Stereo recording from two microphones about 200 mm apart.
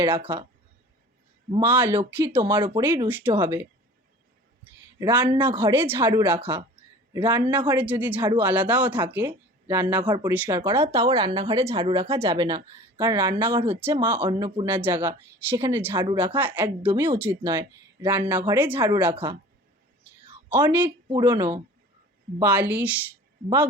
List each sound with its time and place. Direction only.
0.0 s speech: 10° right (ahead or behind)
1.5 s speech: 10° right (ahead or behind)
4.9 s speech: 10° right (ahead or behind)
14.3 s speech: 20° right (ahead or behind)
20.5 s speech: 10° right (ahead or behind)
21.1 s speech: 20° right (ahead or behind)